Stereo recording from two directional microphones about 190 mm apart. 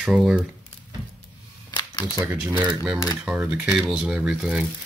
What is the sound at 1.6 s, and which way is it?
Camera, 20° left (ahead or behind).